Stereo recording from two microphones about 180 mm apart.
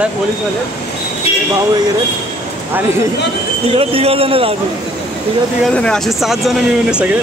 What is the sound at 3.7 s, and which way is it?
Speech, 30° right (ahead or behind).